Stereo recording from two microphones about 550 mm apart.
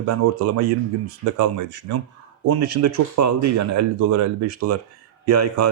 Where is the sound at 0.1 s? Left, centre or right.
Right.